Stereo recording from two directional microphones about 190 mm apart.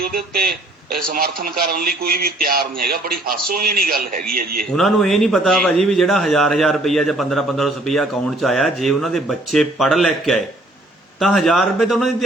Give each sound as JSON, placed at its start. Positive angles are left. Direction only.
{"t": 0.0, "sound": "a man's voice", "side_deg": -55}
{"t": 4.8, "sound": "a man's voice", "side_deg": 0}